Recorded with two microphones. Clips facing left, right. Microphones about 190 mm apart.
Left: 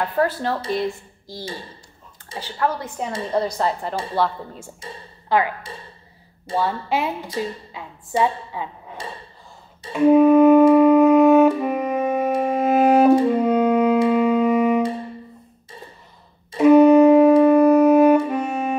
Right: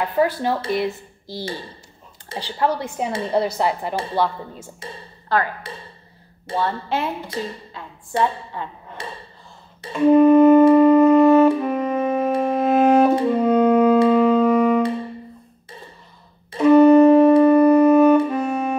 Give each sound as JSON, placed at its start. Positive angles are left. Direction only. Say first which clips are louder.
{"t": 0.0, "sound": "a woman's voice", "louder": "right 2 dB", "side_deg": 0}
{"t": 2.3, "sound": "a woman's voice", "louder": "right 2 dB", "side_deg": -60}
{"t": 3.3, "sound": "a woman's voice", "louder": "right 1 dB", "side_deg": -10}
{"t": 4.1, "sound": "a woman's voice", "louder": "left 1 dB", "side_deg": 0}
{"t": 6.5, "sound": "a woman's voice", "louder": "left 1 dB", "side_deg": 5}
{"t": 8.2, "sound": "a woman's voice", "louder": "left 1 dB", "side_deg": 10}
{"t": 9.9, "sound": "music", "louder": "right 1 dB", "side_deg": 5}
{"t": 16.5, "sound": "music", "louder": "even", "side_deg": 15}